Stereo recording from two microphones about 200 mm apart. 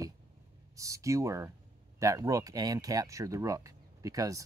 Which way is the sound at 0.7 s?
15° right (ahead or behind).